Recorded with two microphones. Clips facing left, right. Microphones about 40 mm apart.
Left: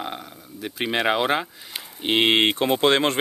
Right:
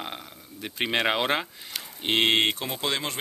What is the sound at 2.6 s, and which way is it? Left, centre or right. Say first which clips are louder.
Speech: left 10 dB; left.